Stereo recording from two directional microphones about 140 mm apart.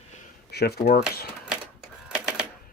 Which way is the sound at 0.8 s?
90° left.